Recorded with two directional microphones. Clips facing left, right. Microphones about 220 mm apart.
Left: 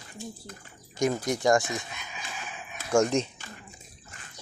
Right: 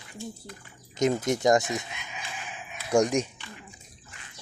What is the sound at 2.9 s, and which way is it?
Speech, 15° right (ahead or behind).